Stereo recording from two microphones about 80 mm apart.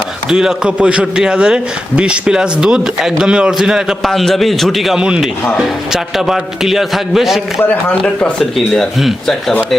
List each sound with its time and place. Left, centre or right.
0.3 s a man's voice: centre
4.0 s a man's voice: centre
7.6 s speech: left
8.7 s a man's voice: centre